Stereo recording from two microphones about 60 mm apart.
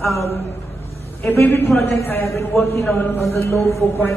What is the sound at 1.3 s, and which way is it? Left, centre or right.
Speech, left.